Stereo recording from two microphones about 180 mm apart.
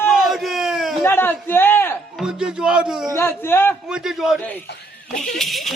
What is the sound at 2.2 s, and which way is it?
Music, 5° right (ahead or behind).